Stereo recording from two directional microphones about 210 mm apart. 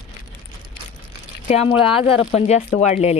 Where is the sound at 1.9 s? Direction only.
5° right (ahead or behind).